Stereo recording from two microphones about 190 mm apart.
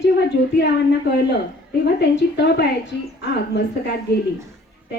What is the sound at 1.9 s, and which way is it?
A woman's voice, 65° left (ahead or behind).